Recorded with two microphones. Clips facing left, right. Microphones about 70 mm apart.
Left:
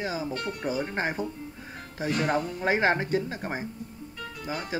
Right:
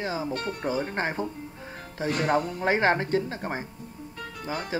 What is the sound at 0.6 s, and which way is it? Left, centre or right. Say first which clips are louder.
Speech: right 1 dB; right.